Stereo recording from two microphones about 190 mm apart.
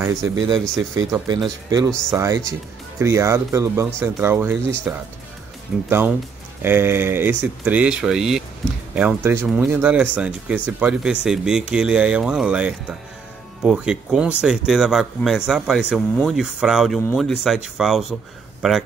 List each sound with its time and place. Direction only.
0.0 s speech: 20° right (ahead or behind); by 18.9 s centre (ahead or behind)